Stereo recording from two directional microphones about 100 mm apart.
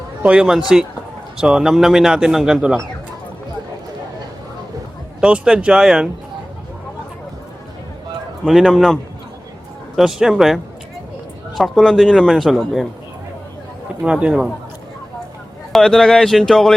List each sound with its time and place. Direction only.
0.2 s a man's voice: 10° right (ahead or behind)
5.2 s speech: 10° right (ahead or behind)
8.4 s a man's voice: centre (ahead or behind)
14.0 s speech: 10° right (ahead or behind)
15.7 s a man's voice: 5° left (ahead or behind)